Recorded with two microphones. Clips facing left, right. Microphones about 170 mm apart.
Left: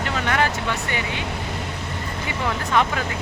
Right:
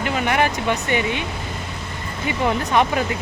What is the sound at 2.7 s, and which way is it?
Speech, 20° right (ahead or behind).